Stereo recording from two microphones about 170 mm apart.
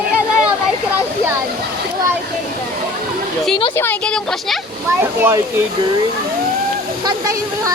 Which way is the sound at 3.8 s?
10° left (ahead or behind).